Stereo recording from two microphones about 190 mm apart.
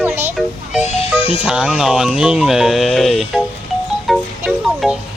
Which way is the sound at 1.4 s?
5° right (ahead or behind).